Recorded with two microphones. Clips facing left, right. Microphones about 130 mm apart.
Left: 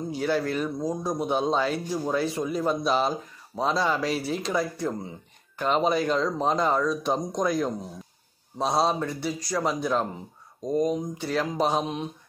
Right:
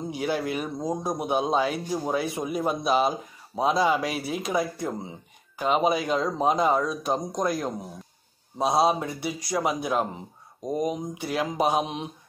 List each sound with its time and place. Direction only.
0.1 s speech: 15° right (ahead or behind)